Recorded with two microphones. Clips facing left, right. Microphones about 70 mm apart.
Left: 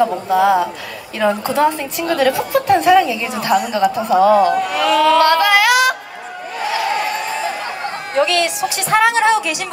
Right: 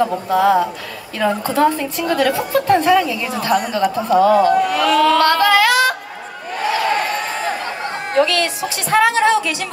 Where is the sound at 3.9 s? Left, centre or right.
Centre.